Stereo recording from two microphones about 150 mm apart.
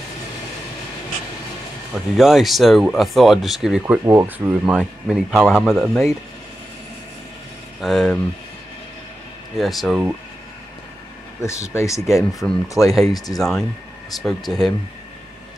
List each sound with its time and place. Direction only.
2.1 s speech: centre (ahead or behind)
3.8 s speech: 15° right (ahead or behind)
4.6 s speech: 5° right (ahead or behind)
7.8 s speech: centre (ahead or behind)
9.6 s speech: centre (ahead or behind)
11.4 s speech: 20° left (ahead or behind)
12.1 s speech: centre (ahead or behind)